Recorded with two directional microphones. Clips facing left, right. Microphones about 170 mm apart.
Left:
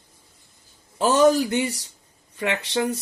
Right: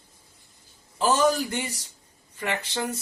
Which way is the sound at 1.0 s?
60° left (ahead or behind).